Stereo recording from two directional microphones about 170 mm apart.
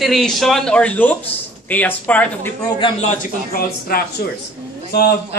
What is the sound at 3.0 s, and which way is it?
Speech, 45° left (ahead or behind).